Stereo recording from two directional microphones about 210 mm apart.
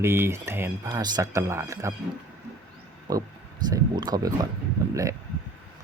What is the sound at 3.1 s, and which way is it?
Speech, 15° right (ahead or behind).